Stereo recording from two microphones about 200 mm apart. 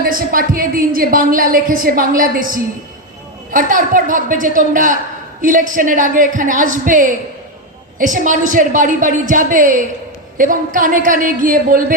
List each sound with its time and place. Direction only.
0.0 s a woman's voice: 45° right (ahead or behind)